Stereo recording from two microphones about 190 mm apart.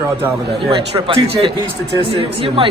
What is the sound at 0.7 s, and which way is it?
A man's voice, 25° right (ahead or behind).